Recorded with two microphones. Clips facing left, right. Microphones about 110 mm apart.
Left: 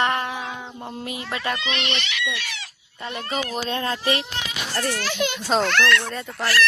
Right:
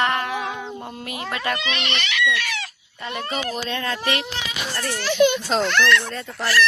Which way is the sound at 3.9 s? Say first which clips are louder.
Left 1 dB; 60° right (ahead or behind).